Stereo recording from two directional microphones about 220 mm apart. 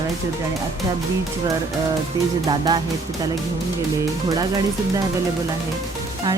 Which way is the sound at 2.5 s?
20° right (ahead or behind).